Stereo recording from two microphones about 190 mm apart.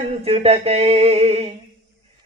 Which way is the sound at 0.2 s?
35° right (ahead or behind).